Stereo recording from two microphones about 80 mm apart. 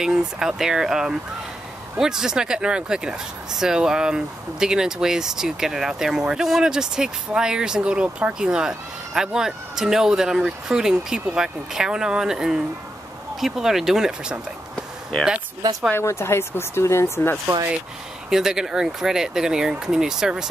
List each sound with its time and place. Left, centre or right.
0.0 s speech: centre
15.9 s speech: left
18.3 s speech: centre